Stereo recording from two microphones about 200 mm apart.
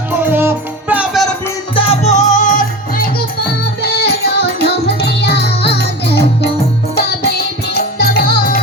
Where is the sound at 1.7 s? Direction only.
30° left (ahead or behind).